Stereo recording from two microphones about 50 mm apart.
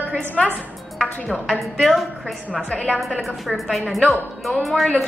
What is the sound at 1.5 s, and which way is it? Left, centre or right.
Speech, centre.